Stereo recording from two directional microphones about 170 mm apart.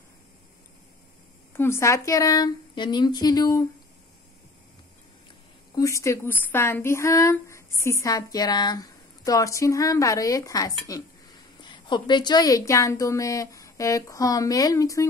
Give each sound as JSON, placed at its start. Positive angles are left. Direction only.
{"t": 1.5, "sound": "speech", "side_deg": 15}
{"t": 5.8, "sound": "speech", "side_deg": 20}